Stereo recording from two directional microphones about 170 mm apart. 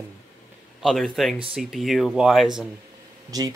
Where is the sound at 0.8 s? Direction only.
Centre (ahead or behind).